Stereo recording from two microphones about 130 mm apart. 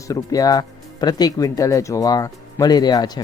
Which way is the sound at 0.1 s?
25° left (ahead or behind).